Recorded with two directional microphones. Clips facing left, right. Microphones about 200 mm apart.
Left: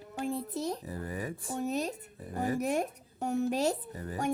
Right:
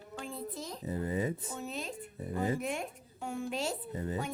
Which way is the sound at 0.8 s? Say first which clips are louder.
Right 4 dB; 20° right (ahead or behind).